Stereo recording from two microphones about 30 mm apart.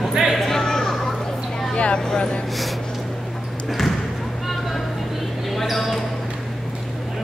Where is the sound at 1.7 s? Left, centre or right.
Left.